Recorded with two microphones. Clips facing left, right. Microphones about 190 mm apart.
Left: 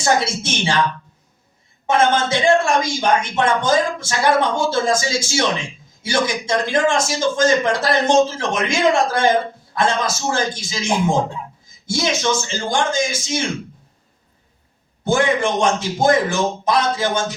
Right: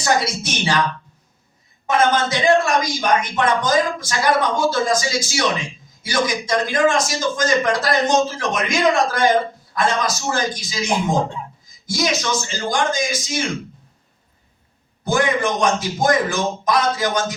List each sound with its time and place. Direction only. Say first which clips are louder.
0.0 s speech: left 1 dB; 25° left (ahead or behind)
1.9 s speech: left 1 dB; 25° left (ahead or behind)
15.0 s speech: left 2 dB; 25° left (ahead or behind)